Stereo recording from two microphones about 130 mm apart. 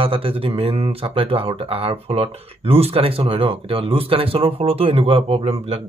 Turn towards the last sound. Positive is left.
turn(degrees=-55)  # may be behind; listen again after turning